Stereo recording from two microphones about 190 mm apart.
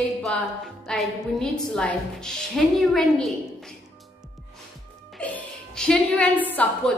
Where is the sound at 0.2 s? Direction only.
5° left (ahead or behind).